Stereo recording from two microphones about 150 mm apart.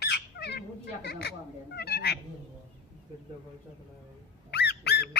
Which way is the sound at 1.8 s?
90° left.